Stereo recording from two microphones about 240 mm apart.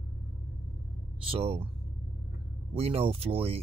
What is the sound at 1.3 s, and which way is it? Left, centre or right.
Speech, right.